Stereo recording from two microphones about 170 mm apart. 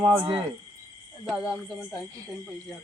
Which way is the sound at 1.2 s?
5° right (ahead or behind).